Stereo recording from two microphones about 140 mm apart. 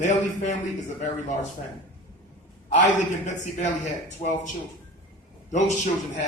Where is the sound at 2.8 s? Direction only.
60° left (ahead or behind).